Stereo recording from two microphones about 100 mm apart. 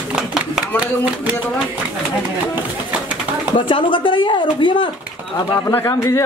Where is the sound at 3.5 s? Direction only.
55° left (ahead or behind).